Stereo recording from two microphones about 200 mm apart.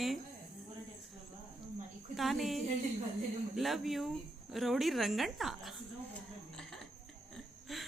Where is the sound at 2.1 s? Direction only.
Centre (ahead or behind).